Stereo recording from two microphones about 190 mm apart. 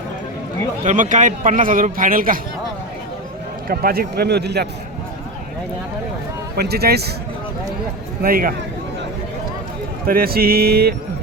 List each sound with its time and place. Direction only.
0.9 s a man's voice: 40° right (ahead or behind)
3.7 s speech: 50° right (ahead or behind)
6.6 s speech: 55° right (ahead or behind)
8.2 s a man's voice: 50° right (ahead or behind)
10.1 s a man's voice: 50° right (ahead or behind)